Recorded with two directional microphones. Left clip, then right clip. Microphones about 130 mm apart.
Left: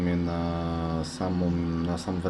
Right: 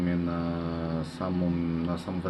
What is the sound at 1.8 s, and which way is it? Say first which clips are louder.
Speech: left 2 dB; 35° left (ahead or behind).